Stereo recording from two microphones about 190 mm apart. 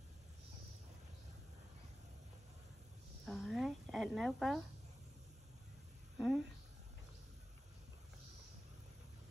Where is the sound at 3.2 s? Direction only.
Centre (ahead or behind).